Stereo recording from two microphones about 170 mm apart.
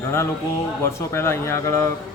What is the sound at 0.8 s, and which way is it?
Speech, 15° left (ahead or behind).